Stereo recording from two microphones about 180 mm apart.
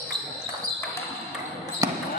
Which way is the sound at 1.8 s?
20° right (ahead or behind).